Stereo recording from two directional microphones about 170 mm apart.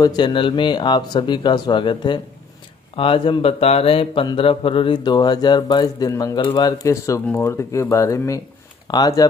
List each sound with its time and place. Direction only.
0.0 s speech: 25° left (ahead or behind)